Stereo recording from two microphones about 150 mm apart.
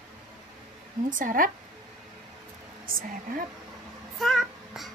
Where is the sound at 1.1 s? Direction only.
65° right (ahead or behind).